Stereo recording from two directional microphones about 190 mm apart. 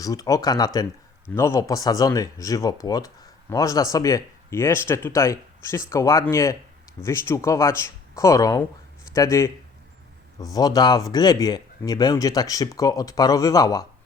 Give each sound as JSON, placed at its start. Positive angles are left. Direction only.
{"t": 0.0, "sound": "speech", "side_deg": 20}